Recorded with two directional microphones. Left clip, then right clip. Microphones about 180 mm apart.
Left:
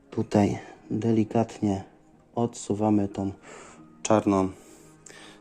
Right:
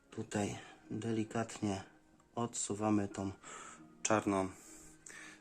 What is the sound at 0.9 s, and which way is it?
Speech, 25° left (ahead or behind).